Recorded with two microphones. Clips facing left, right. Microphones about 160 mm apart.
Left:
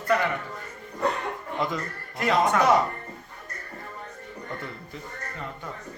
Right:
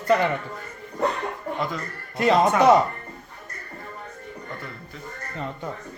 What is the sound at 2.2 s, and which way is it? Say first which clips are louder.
Speech: right 4 dB; 25° right (ahead or behind).